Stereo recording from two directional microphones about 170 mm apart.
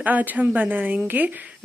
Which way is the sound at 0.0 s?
10° right (ahead or behind).